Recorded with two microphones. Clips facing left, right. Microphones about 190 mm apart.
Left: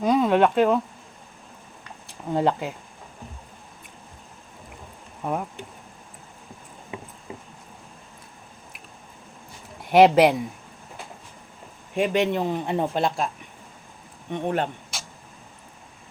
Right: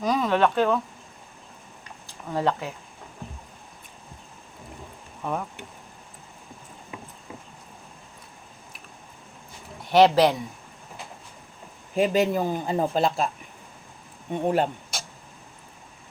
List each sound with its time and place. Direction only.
0.0 s a sound: 25° left (ahead or behind)
0.3 s speech: 15° left (ahead or behind)
2.0 s speech: 25° left (ahead or behind)
5.2 s speech: 15° left (ahead or behind)
9.9 s speech: 15° left (ahead or behind)
11.9 s speech: 5° right (ahead or behind)
14.3 s speech: 10° right (ahead or behind)